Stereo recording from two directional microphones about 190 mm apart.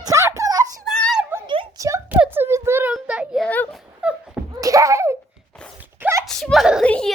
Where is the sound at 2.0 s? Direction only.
10° right (ahead or behind).